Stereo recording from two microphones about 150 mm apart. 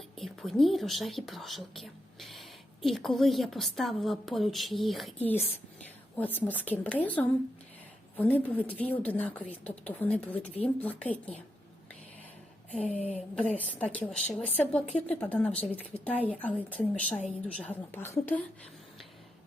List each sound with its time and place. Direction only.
0.2 s speech: centre (ahead or behind)
6.1 s a woman's voice: 10° left (ahead or behind)
13.0 s a woman's voice: 45° left (ahead or behind)
13.3 s a woman's voice: 10° left (ahead or behind)